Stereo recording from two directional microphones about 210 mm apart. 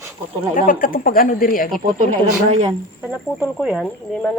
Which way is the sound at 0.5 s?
40° left (ahead or behind).